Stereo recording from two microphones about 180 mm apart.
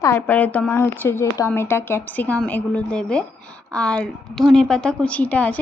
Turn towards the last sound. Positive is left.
turn(degrees=10)  # may be behind; listen again after turning